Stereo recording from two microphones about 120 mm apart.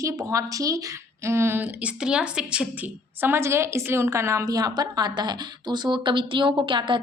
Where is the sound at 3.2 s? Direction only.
20° right (ahead or behind).